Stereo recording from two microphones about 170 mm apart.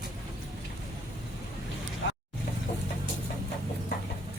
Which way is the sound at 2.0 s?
90° left.